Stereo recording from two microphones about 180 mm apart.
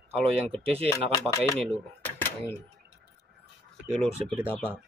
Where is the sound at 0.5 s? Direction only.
35° right (ahead or behind).